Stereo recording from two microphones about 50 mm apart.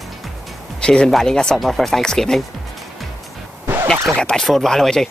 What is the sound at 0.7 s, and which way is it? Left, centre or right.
Speech, centre.